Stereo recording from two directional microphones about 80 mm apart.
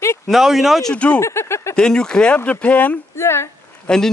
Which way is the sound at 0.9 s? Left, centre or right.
Centre.